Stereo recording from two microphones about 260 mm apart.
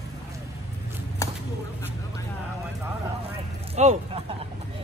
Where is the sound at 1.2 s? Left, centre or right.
Centre.